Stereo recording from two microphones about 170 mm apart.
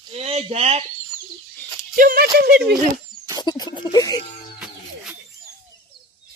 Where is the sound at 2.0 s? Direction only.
65° right (ahead or behind).